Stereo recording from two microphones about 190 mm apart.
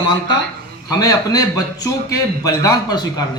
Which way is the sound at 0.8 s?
20° left (ahead or behind).